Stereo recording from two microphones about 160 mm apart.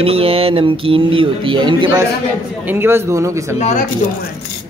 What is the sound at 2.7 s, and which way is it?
Speech, 15° right (ahead or behind).